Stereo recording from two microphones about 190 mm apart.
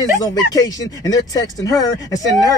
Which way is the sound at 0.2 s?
20° left (ahead or behind).